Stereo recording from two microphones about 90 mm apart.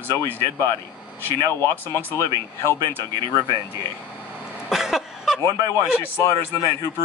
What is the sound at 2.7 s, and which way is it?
Speech, 25° left (ahead or behind).